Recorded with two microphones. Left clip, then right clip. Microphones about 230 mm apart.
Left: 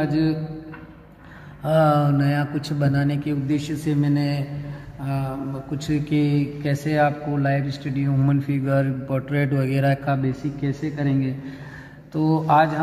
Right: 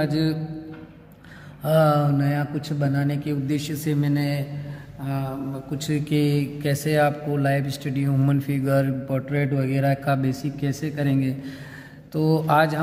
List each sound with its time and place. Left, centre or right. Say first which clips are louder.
0.0 s speech: left 2 dB; right
1.6 s speech: left 1 dB; right
3.4 s speech: left 3 dB; right
5.0 s mantra: left 1 dB; centre
5.7 s speech: left 1 dB; right
9.3 s speech: left 2 dB; right
10.0 s a man's voice: even; right